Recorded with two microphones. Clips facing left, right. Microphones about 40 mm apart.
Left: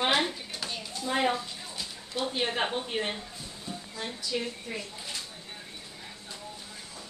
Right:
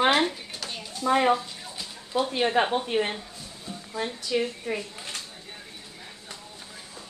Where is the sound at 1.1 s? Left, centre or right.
Right.